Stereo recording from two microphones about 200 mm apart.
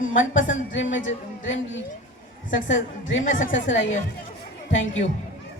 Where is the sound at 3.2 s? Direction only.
40° left (ahead or behind).